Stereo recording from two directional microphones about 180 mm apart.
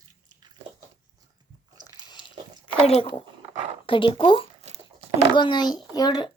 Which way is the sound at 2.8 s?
35° left (ahead or behind).